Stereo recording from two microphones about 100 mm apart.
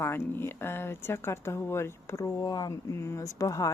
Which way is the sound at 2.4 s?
45° left (ahead or behind).